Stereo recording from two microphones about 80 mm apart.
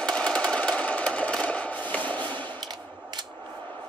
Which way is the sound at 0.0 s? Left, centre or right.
Centre.